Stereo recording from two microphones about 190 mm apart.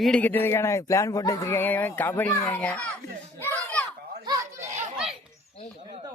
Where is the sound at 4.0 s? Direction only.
55° right (ahead or behind).